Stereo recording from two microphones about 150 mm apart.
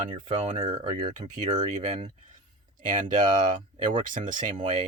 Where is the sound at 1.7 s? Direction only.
55° right (ahead or behind).